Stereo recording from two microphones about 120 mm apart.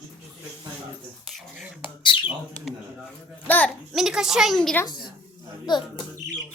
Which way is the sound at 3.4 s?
15° left (ahead or behind).